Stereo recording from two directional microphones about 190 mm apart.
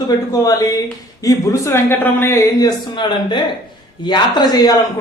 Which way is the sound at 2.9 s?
25° left (ahead or behind).